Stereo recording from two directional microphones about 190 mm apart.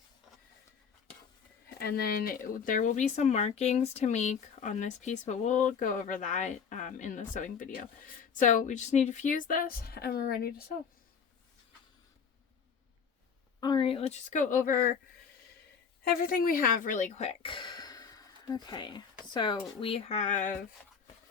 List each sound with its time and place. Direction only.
1.8 s speech: 55° left (ahead or behind)
13.6 s speech: 25° left (ahead or behind); by 14.9 s 50° left (ahead or behind)
16.0 s speech: 50° left (ahead or behind)